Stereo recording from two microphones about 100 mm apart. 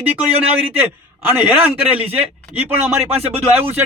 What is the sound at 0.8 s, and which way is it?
A man's voice, 20° right (ahead or behind).